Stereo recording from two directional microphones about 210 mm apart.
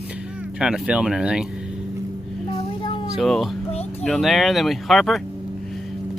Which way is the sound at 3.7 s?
30° left (ahead or behind).